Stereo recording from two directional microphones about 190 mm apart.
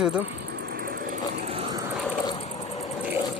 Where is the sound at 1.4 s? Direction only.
30° right (ahead or behind).